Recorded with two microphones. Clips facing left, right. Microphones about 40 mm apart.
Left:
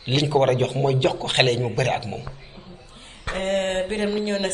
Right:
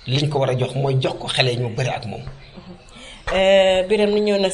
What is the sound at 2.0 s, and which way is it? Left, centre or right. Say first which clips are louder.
Speech: right 1 dB; centre.